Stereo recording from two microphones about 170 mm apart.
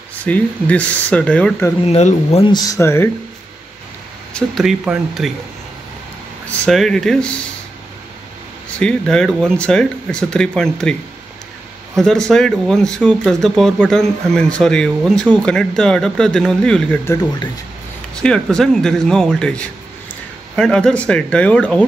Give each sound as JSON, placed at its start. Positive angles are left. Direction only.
{"t": 0.2, "sound": "speech", "side_deg": 10}
{"t": 1.9, "sound": "speech", "side_deg": 40}
{"t": 2.5, "sound": "speech", "side_deg": 20}
{"t": 4.3, "sound": "speech", "side_deg": 5}
{"t": 6.6, "sound": "speech", "side_deg": 0}
{"t": 8.7, "sound": "speech", "side_deg": 5}
{"t": 12.0, "sound": "speech", "side_deg": 5}
{"t": 18.2, "sound": "speech", "side_deg": 5}